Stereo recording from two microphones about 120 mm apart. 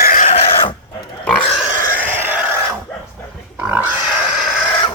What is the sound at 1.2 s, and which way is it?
Pig, 10° left (ahead or behind).